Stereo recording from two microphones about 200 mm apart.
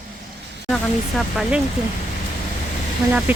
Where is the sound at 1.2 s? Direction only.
Centre (ahead or behind).